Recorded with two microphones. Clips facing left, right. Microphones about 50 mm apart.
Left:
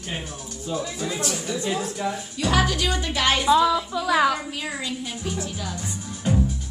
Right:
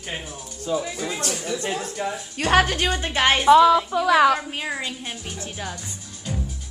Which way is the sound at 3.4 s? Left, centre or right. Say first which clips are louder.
Right 6 dB; right.